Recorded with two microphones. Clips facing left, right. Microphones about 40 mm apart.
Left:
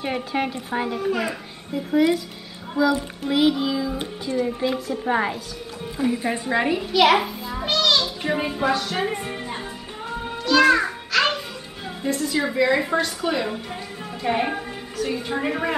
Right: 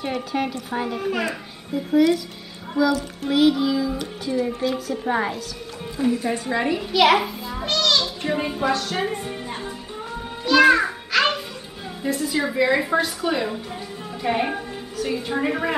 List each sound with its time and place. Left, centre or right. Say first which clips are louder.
0.0 s a woman's voice: even; centre
0.9 s speech: even; centre
2.0 s a woman's voice: right 1 dB; centre
4.5 s a woman's voice: even; centre
4.9 s a woman's voice: left 1 dB; centre
6.1 s a woman's voice: left 1 dB; centre
6.8 s a child's voice: right 1 dB; centre
10.4 s music: right 2 dB; centre
12.0 s a woman's voice: even; centre